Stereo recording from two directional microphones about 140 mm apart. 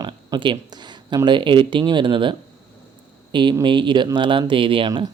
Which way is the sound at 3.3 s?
35° right (ahead or behind).